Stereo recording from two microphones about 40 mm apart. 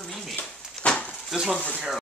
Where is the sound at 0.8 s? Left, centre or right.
Left.